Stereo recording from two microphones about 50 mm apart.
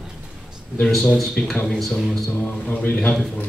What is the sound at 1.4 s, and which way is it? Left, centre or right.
Speech, left.